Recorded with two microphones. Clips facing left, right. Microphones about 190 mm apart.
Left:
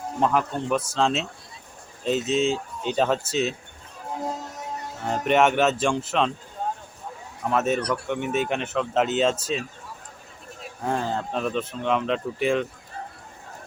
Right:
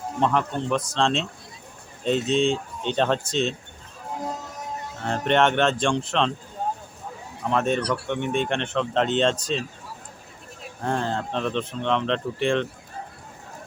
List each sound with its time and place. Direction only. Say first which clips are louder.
0.2 s speech: even; 5° left (ahead or behind)
5.0 s speech: left 1 dB; 5° left (ahead or behind)
7.5 s speech: even; 5° left (ahead or behind)
7.8 s speech: right 1 dB; 30° right (ahead or behind)
8.0 s speech: even; 5° left (ahead or behind)